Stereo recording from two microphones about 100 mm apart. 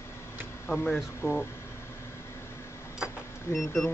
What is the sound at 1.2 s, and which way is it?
Speech, 20° left (ahead or behind).